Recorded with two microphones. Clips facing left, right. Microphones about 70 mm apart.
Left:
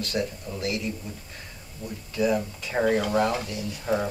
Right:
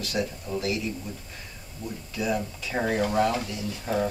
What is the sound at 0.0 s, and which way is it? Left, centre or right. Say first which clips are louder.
Speech: left 1 dB; centre.